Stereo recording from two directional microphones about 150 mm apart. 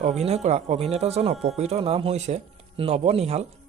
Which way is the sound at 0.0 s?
50° right (ahead or behind).